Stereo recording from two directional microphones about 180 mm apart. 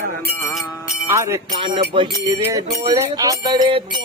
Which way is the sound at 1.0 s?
15° right (ahead or behind).